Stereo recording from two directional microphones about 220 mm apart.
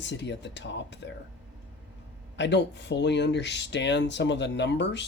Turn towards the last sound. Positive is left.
turn(degrees=55)  # may be behind; listen again after turning